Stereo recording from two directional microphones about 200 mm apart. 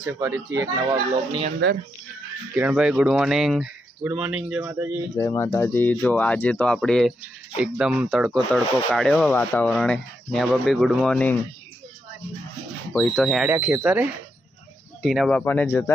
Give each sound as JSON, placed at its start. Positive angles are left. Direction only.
{"t": 0.0, "sound": "speech", "side_deg": -15}
{"t": 2.6, "sound": "speech", "side_deg": -5}
{"t": 5.1, "sound": "speech", "side_deg": 15}
{"t": 12.9, "sound": "speech", "side_deg": 0}